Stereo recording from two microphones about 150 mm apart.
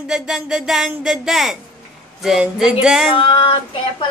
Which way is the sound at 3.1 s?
35° left (ahead or behind).